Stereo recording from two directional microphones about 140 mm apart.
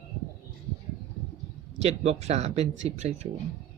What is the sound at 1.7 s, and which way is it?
Speech, 50° right (ahead or behind).